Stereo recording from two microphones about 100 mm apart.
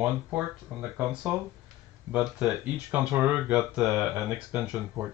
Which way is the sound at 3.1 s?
20° right (ahead or behind).